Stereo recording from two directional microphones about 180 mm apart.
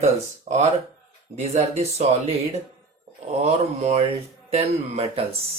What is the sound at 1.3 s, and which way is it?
Speech, 35° right (ahead or behind).